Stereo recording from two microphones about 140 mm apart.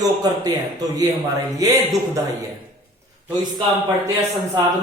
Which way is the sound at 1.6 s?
25° right (ahead or behind).